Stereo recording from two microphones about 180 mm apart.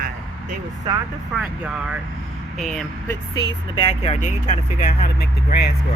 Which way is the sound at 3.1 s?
20° left (ahead or behind).